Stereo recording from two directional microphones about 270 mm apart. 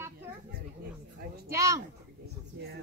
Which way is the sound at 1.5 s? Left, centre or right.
Centre.